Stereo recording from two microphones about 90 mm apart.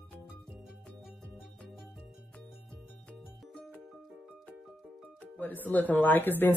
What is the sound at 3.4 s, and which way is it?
Music, 10° left (ahead or behind).